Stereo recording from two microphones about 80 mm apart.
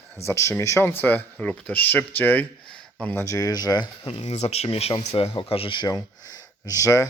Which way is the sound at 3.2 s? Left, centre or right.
Left.